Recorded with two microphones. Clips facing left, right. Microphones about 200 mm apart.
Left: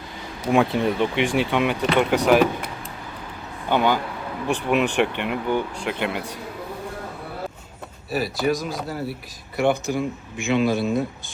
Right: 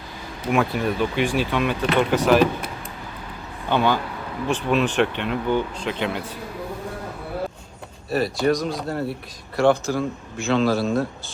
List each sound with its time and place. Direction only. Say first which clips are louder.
0.4 s speech: left 2 dB; 20° left (ahead or behind)
3.7 s speech: even; 15° left (ahead or behind)
8.1 s speech: right 2 dB; centre (ahead or behind)
9.6 s speech: right 3 dB; 15° left (ahead or behind)